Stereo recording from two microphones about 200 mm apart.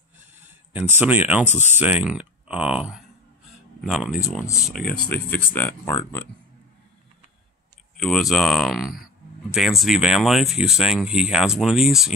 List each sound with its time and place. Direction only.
0.4 s a sound: 10° right (ahead or behind)
1.0 s speech: 10° right (ahead or behind)
4.7 s speech: 50° left (ahead or behind)
5.1 s speech: 10° left (ahead or behind)
8.0 s speech: centre (ahead or behind)